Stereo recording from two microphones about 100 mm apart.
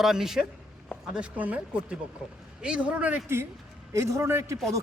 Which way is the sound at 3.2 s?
25° right (ahead or behind).